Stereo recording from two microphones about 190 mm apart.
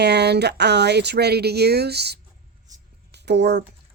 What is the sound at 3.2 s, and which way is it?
Speech, 65° right (ahead or behind).